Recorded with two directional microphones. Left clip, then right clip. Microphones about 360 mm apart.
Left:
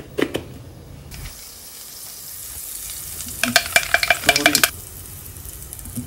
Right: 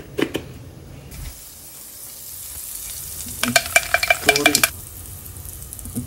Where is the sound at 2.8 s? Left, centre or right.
Centre.